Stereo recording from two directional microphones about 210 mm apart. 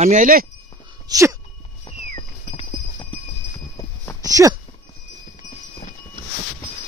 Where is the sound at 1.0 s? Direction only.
15° right (ahead or behind).